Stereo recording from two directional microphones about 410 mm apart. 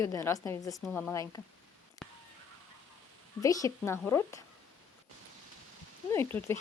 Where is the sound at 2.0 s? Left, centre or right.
Centre.